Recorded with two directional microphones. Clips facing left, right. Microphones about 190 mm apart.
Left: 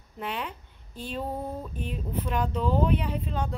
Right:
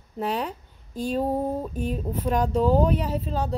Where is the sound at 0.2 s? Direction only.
40° right (ahead or behind).